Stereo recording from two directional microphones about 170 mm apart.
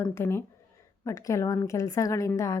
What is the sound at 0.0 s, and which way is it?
Speech, 15° left (ahead or behind).